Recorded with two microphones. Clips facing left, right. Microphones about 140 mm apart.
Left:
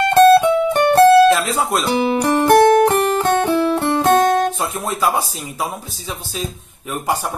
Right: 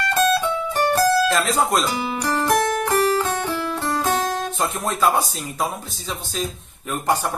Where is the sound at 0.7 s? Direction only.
65° left (ahead or behind).